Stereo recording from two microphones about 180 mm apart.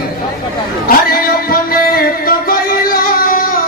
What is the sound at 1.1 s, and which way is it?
Music, 55° left (ahead or behind).